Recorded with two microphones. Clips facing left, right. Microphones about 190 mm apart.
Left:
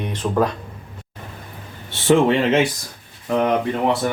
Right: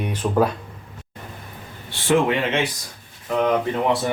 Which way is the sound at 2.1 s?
35° left (ahead or behind).